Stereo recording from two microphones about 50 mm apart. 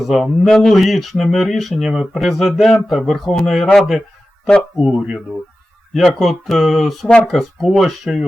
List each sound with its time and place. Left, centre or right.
0.0 s speech: centre
4.8 s speech: centre
6.1 s speech: centre